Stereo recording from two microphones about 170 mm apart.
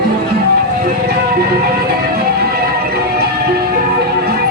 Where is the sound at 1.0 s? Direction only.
65° right (ahead or behind).